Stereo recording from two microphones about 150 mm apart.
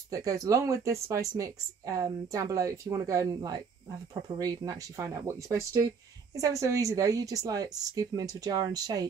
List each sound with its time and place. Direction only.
0.1 s a woman's voice: 20° right (ahead or behind)